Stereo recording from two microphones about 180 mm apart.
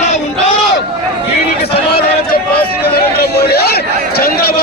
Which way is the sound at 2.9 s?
60° left (ahead or behind).